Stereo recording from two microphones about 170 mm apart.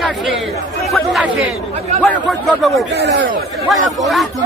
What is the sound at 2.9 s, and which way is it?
Speech, 90° right.